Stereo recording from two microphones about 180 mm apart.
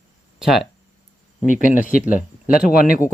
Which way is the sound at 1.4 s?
45° left (ahead or behind).